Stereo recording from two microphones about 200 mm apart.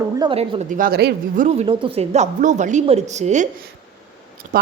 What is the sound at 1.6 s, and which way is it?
Speech, 30° right (ahead or behind).